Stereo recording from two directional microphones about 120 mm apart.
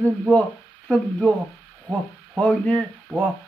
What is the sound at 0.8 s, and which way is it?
Speech, 5° left (ahead or behind).